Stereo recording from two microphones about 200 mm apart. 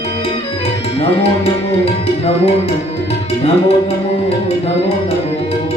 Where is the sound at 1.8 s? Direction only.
30° left (ahead or behind).